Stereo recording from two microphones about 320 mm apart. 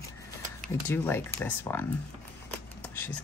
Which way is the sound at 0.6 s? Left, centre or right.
Centre.